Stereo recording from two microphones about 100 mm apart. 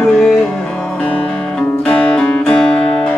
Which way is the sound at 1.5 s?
5° left (ahead or behind).